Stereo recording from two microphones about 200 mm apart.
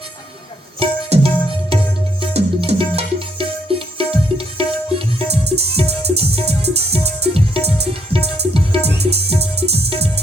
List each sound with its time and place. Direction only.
0.8 s music: 30° right (ahead or behind)